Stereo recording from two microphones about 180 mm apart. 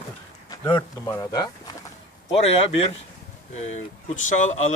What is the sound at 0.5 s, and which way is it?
Speech, 15° left (ahead or behind).